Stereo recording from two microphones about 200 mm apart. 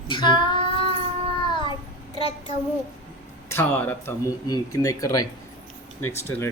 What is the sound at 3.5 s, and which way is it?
Speech, 10° left (ahead or behind).